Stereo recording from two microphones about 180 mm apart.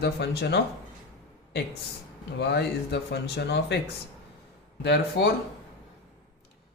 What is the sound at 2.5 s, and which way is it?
Speech, 70° left (ahead or behind).